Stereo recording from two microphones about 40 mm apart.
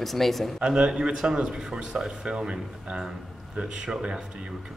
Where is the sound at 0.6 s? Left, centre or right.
Right.